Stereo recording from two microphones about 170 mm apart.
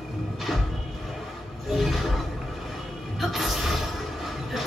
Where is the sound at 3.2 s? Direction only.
Centre (ahead or behind).